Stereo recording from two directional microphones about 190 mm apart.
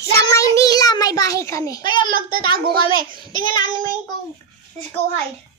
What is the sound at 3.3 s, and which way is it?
Child singing, 45° right (ahead or behind).